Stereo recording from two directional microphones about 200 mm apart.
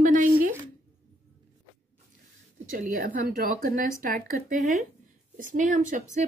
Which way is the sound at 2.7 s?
45° right (ahead or behind).